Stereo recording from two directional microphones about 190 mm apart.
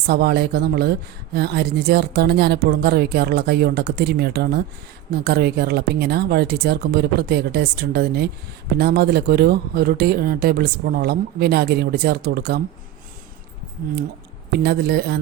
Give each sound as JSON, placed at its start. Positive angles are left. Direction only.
{"t": 0.1, "sound": "speech", "side_deg": -55}
{"t": 14.5, "sound": "speech", "side_deg": -55}